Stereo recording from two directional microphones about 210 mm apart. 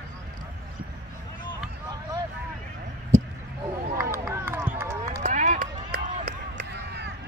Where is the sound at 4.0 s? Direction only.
10° right (ahead or behind).